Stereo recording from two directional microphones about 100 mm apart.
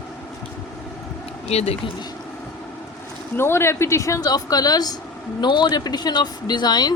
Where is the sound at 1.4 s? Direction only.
90° left.